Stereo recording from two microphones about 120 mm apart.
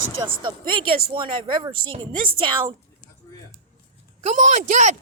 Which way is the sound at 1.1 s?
40° right (ahead or behind).